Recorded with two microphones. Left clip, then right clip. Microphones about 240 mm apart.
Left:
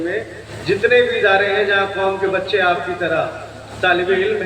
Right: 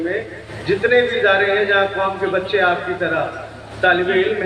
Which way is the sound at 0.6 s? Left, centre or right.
Left.